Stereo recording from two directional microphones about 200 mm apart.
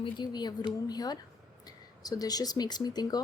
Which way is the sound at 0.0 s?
20° left (ahead or behind).